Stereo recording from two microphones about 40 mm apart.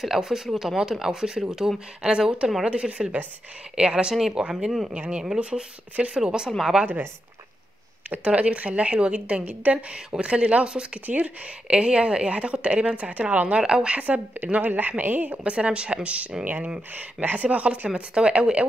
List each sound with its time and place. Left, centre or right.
0.0 s a woman's voice: centre
4.8 s a woman's voice: right
8.2 s a woman's voice: right
11.1 s speech: right
11.6 s a woman's voice: right
13.6 s a woman's voice: right
13.9 s speech: right
14.6 s a woman's voice: right
15.4 s speech: right
16.9 s a woman's voice: right